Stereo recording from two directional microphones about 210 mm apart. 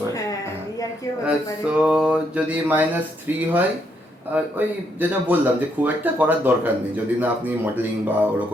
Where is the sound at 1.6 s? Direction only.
5° right (ahead or behind).